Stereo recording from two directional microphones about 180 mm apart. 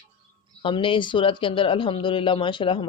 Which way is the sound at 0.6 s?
30° left (ahead or behind).